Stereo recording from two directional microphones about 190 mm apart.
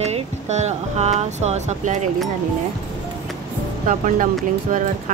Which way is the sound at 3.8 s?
45° right (ahead or behind).